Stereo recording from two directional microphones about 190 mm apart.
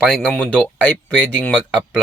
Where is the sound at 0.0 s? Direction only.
5° left (ahead or behind).